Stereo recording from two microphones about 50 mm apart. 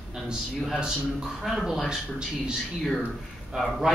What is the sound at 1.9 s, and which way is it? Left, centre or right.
Speech, centre.